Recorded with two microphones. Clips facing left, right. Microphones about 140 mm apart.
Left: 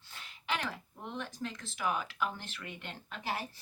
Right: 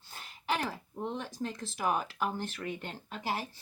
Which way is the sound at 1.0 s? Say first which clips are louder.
Right 4 dB; 35° right (ahead or behind).